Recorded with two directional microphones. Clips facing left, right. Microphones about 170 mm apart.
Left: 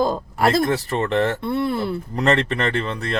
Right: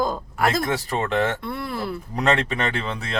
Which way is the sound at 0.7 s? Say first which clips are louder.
Left 3 dB; centre (ahead or behind).